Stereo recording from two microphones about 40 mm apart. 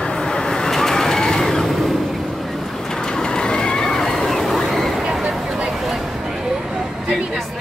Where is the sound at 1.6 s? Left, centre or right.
Centre.